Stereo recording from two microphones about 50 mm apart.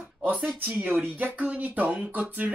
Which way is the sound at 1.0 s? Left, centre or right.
Right.